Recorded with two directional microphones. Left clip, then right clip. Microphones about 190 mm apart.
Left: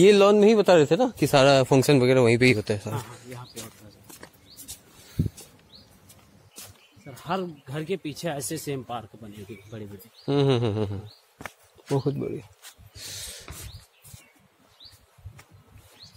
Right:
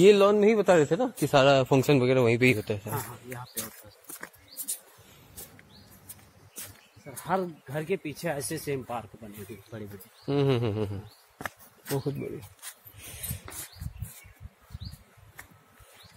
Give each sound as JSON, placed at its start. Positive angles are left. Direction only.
{"t": 0.0, "sound": "a man's voice", "side_deg": 45}
{"t": 7.1, "sound": "speech", "side_deg": 50}
{"t": 9.7, "sound": "speech", "side_deg": 35}
{"t": 11.3, "sound": "a sound", "side_deg": -15}